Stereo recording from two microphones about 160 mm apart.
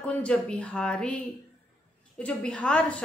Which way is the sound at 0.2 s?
5° left (ahead or behind).